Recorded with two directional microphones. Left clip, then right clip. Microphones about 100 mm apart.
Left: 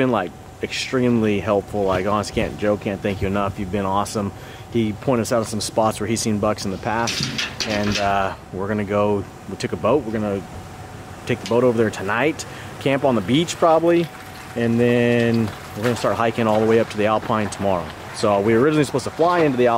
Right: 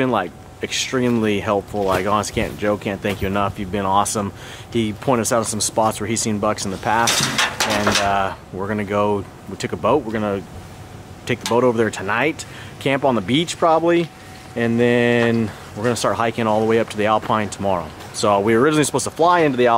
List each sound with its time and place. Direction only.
0.0 s speech: centre (ahead or behind)
7.1 s speech: 35° right (ahead or behind)
8.0 s speech: centre (ahead or behind)
11.5 s speech: centre (ahead or behind)